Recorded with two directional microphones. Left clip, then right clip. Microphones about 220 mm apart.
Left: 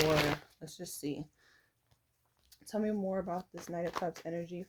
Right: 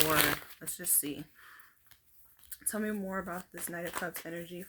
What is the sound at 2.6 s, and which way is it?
Speech, 20° right (ahead or behind).